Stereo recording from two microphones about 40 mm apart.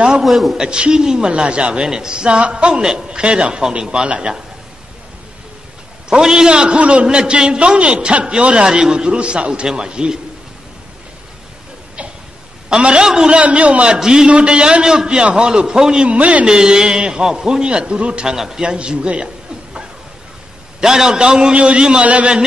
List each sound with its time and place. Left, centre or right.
0.2 s a man's voice: centre
0.6 s a woman's voice: right
6.0 s a woman's voice: centre
13.0 s a man's voice: centre
13.3 s a man's voice: right
13.9 s a man's voice: centre
16.1 s a man's voice: right
16.4 s a woman's voice: centre
18.3 s a man's voice: centre
18.7 s a woman's voice: right
20.8 s a woman's voice: centre; by 22.3 s right